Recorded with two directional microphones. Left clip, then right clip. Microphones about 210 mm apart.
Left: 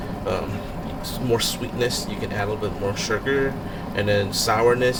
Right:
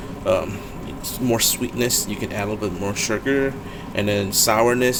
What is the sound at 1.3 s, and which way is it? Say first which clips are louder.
Speech: right 2 dB; 40° right (ahead or behind).